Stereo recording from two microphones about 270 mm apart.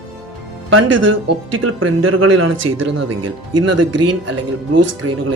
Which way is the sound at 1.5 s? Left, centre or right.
Right.